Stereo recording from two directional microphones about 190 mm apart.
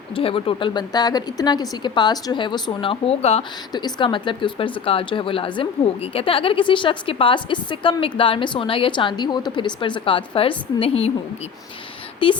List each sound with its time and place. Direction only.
0.1 s speech: 30° left (ahead or behind)
3.7 s a woman's voice: 20° left (ahead or behind)
12.2 s speech: 25° left (ahead or behind)